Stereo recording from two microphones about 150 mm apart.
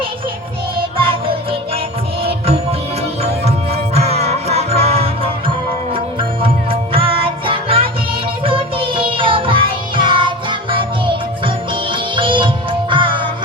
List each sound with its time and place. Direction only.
0.9 s music: 35° right (ahead or behind)
3.4 s music: 45° right (ahead or behind)